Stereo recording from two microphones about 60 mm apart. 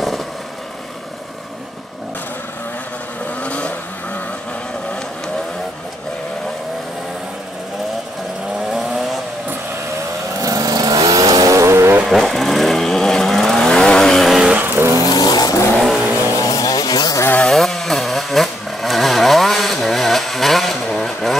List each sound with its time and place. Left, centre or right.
3.4 s vehicle: left
8.7 s vehicle: centre
10.4 s vehicle: right
12.0 s vehicle: centre
14.5 s vehicle: right
15.0 s vehicle: left
16.0 s vehicle: right
16.3 s chainsaw: left
17.5 s chainsaw: centre